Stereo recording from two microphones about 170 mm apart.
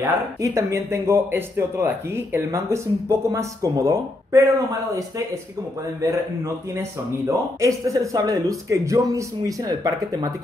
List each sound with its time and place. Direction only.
0.0 s speech: 20° right (ahead or behind)
5.9 s a man's voice: 20° right (ahead or behind)